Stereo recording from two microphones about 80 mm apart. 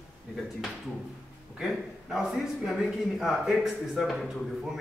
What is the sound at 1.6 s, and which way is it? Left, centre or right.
A man's voice, centre.